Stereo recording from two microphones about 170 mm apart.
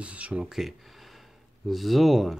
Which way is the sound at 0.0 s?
10° right (ahead or behind).